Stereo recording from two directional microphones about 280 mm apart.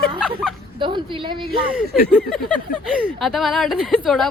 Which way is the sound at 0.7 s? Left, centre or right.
Centre.